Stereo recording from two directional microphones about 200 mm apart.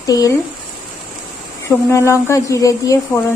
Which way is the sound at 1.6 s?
15° left (ahead or behind).